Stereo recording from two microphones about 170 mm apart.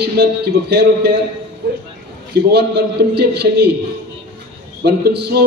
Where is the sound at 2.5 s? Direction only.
75° right (ahead or behind).